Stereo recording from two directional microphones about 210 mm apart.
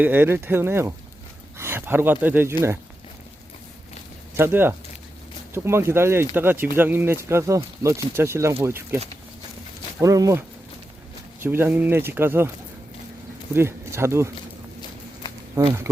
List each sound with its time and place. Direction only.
0.0 s speech: 10° right (ahead or behind)
4.4 s speech: 10° right (ahead or behind)
10.0 s speech: 15° right (ahead or behind)
11.4 s speech: 10° right (ahead or behind)
13.5 s speech: 10° right (ahead or behind)
15.6 s speech: 15° right (ahead or behind)